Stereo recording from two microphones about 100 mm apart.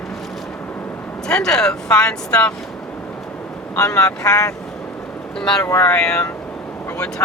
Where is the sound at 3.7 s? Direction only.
30° left (ahead or behind).